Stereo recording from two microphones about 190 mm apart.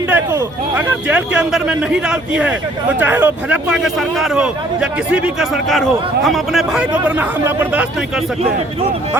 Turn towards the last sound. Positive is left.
turn(degrees=-10)  # may be behind; listen again after turning